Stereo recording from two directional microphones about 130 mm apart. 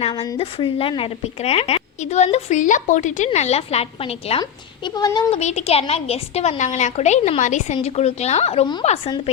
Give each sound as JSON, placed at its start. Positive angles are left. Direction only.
{"t": 0.1, "sound": "speech", "side_deg": 30}
{"t": 0.3, "sound": "a woman's voice", "side_deg": 45}
{"t": 3.2, "sound": "a woman's voice", "side_deg": 55}
{"t": 4.4, "sound": "a woman's voice", "side_deg": 35}
{"t": 5.3, "sound": "a woman's voice", "side_deg": 60}